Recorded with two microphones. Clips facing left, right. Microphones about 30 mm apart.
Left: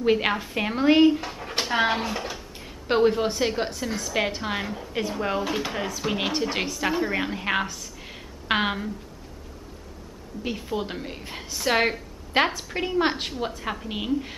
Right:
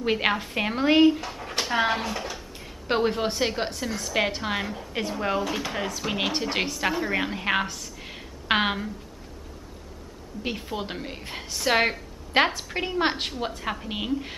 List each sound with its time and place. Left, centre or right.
0.0 s a woman's voice: centre
10.4 s a woman's voice: centre